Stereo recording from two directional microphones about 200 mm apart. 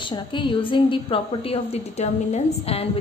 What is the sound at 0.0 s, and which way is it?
A woman's voice, 25° left (ahead or behind).